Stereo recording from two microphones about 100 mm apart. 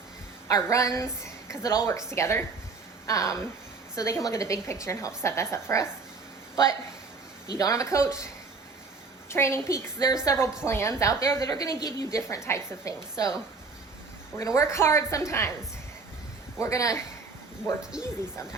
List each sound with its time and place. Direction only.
0.4 s a woman's voice: 35° left (ahead or behind)
7.5 s a woman's voice: 35° left (ahead or behind)
9.3 s a woman's voice: 25° left (ahead or behind)
14.3 s a woman's voice: 35° left (ahead or behind)
16.6 s a woman's voice: 30° left (ahead or behind)
17.9 s speech: 5° right (ahead or behind)